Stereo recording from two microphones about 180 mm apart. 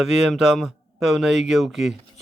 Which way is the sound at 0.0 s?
Centre (ahead or behind).